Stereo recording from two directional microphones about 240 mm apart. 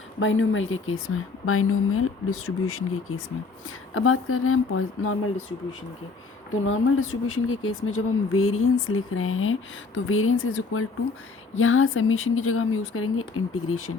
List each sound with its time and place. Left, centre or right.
0.2 s speech: left
6.7 s speech: left